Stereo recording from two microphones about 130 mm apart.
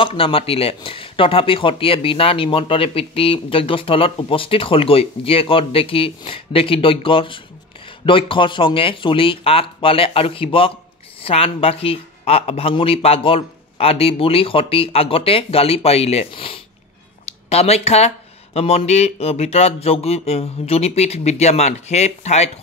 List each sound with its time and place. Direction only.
0.0 s speech: 45° left (ahead or behind)